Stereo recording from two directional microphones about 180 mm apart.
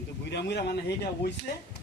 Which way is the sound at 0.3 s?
70° left (ahead or behind).